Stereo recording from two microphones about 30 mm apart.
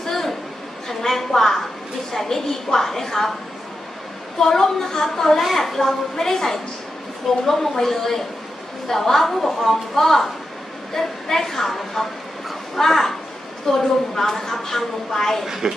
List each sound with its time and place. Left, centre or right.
0.0 s a sound: centre
0.8 s a woman's voice: centre
4.4 s a woman's voice: centre
15.4 s speech: centre